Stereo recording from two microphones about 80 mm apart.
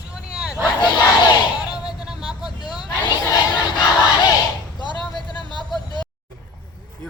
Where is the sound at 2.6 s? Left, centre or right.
Left.